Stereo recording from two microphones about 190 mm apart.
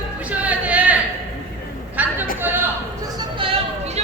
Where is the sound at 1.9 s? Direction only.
10° right (ahead or behind).